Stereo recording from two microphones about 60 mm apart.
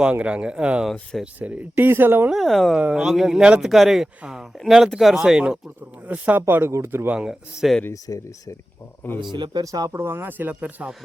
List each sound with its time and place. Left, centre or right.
0.0 s speech: centre; by 2.3 s right
2.3 s speech: centre
6.1 s speech: right
6.5 s speech: right
7.6 s speech: centre
8.0 s speech: left
9.0 s speech: left
9.6 s speech: right
10.0 s speech: right
10.5 s speech: centre